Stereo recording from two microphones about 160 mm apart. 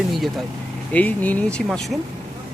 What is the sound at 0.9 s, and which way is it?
Speech, 10° left (ahead or behind).